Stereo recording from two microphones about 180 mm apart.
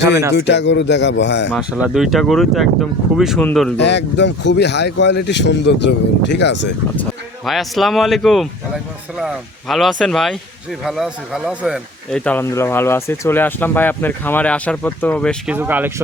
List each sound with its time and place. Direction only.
0.3 s speech: 75° left (ahead or behind)
1.5 s speech: 5° right (ahead or behind)
3.8 s speech: 75° left (ahead or behind)
7.0 s speech: centre (ahead or behind)
15.4 s speech: 10° right (ahead or behind)